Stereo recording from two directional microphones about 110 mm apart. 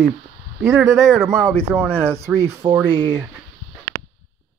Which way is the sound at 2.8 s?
45° right (ahead or behind).